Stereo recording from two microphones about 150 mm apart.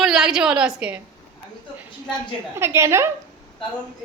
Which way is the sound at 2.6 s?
15° right (ahead or behind).